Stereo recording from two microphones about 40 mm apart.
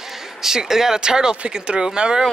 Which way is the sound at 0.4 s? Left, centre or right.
Centre.